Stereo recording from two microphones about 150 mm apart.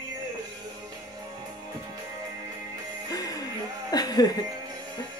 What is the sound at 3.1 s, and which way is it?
Music, 25° left (ahead or behind).